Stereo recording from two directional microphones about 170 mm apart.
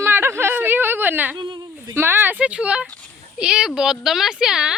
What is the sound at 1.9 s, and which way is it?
A woman's voice, 15° right (ahead or behind).